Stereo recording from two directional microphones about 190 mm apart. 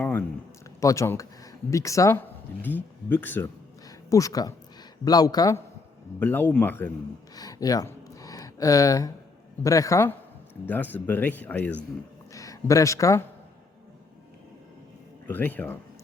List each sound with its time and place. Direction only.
0.8 s speech: 15° left (ahead or behind)
7.3 s a sound: 20° left (ahead or behind)
9.6 s speech: 15° left (ahead or behind)
15.3 s speech: 10° left (ahead or behind)